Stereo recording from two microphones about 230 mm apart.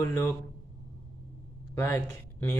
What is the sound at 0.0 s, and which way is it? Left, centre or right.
Speech, centre.